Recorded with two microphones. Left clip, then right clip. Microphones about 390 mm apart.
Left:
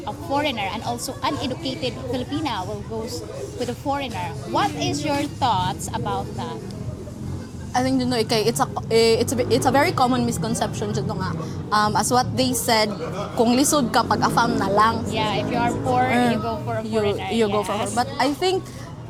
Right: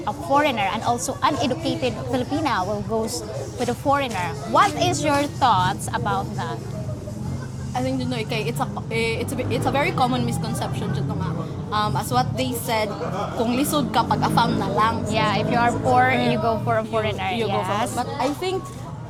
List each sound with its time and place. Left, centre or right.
0.0 s a woman's voice: right
2.1 s speech: right
3.7 s speech: right
7.7 s a woman's voice: left
10.6 s a woman's voice: left
15.1 s speech: right
17.9 s a woman's voice: left